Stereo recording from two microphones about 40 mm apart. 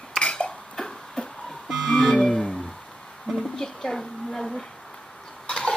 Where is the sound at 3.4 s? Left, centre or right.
Centre.